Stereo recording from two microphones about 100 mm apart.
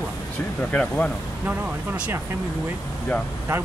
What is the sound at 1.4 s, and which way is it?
Speech, 20° right (ahead or behind).